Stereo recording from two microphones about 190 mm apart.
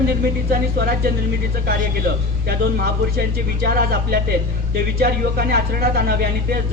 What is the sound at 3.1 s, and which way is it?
Speech, 55° right (ahead or behind).